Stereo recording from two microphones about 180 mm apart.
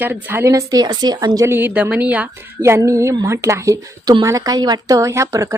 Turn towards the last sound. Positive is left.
turn(degrees=-15)  # may be behind; listen again after turning